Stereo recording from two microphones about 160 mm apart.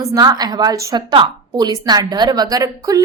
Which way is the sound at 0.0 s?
20° right (ahead or behind).